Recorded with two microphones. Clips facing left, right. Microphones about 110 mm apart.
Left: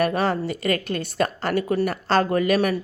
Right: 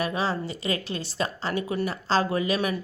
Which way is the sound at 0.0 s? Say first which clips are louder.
Left 6 dB; 60° left (ahead or behind).